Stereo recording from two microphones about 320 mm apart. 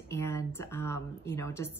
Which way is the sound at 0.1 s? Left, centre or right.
Centre.